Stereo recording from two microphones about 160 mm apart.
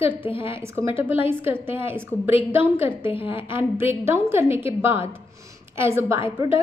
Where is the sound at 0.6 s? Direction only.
15° right (ahead or behind).